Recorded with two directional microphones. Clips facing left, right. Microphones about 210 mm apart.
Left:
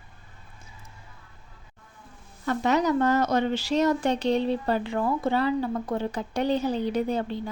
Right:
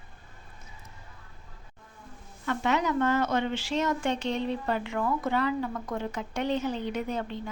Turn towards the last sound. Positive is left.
turn(degrees=35)  # may be behind; listen again after turning